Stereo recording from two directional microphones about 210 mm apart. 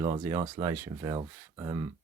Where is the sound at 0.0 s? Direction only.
15° right (ahead or behind).